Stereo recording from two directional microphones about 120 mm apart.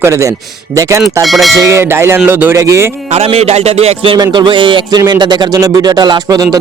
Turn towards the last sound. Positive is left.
turn(degrees=-30)  # may be behind; listen again after turning